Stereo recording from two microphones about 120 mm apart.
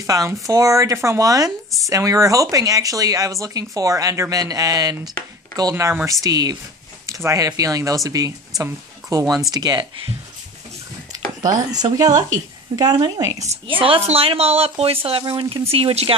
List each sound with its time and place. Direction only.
0.0 s speech: 30° right (ahead or behind)
11.7 s speech: 30° right (ahead or behind)
13.7 s speech: 50° right (ahead or behind)
15.7 s speech: 55° right (ahead or behind)